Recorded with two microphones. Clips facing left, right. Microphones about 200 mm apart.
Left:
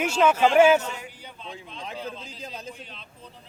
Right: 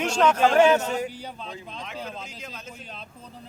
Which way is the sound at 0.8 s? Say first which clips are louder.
Right 8 dB; 40° right (ahead or behind).